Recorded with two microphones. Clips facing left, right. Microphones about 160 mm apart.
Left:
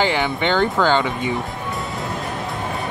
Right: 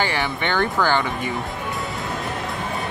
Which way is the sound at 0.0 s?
20° left (ahead or behind).